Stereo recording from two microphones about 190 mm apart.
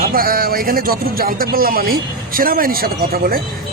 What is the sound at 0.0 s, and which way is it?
Speech, 50° right (ahead or behind).